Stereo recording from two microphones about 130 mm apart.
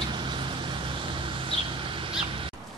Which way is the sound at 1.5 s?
45° right (ahead or behind).